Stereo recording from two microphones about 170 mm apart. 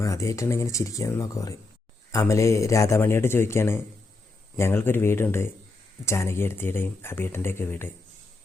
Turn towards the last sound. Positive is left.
turn(degrees=15)  # may be behind; listen again after turning